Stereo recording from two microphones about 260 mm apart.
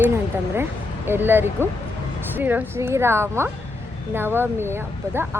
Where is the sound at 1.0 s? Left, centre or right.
Centre.